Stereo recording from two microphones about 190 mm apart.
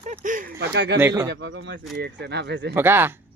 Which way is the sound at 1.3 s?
75° right (ahead or behind).